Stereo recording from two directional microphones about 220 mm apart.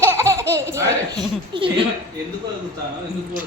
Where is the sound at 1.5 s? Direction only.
20° right (ahead or behind).